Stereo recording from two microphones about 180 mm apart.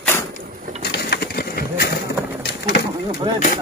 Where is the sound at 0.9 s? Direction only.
65° left (ahead or behind).